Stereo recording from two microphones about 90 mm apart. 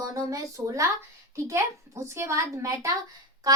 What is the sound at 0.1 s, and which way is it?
Speech, 40° right (ahead or behind).